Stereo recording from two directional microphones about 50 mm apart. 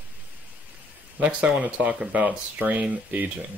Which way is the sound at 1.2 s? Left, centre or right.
Right.